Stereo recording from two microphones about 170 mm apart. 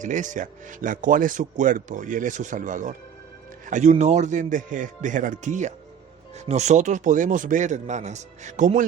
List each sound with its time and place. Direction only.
0.0 s speech: 50° right (ahead or behind)